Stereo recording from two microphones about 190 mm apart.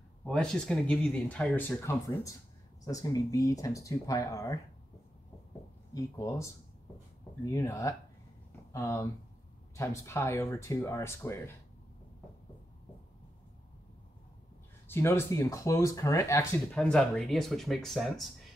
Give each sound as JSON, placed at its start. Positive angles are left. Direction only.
{"t": 0.2, "sound": "speech", "side_deg": 5}
{"t": 5.9, "sound": "speech", "side_deg": 15}
{"t": 7.5, "sound": "speech", "side_deg": 15}
{"t": 14.9, "sound": "speech", "side_deg": 10}